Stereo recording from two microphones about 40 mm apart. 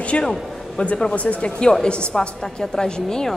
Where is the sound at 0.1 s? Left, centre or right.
Left.